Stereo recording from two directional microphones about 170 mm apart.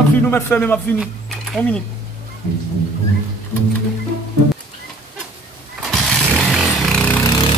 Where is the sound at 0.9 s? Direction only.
Centre (ahead or behind).